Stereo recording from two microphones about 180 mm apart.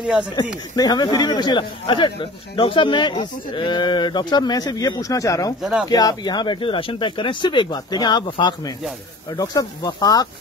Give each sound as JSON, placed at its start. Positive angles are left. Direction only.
{"t": 0.0, "sound": "speech", "side_deg": -5}
{"t": 0.7, "sound": "speech", "side_deg": 20}
{"t": 5.6, "sound": "speech", "side_deg": -5}
{"t": 5.9, "sound": "speech", "side_deg": 20}